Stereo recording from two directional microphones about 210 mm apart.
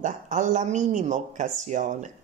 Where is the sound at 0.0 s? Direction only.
35° right (ahead or behind).